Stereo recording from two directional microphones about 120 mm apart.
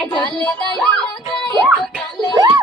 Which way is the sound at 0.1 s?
40° left (ahead or behind).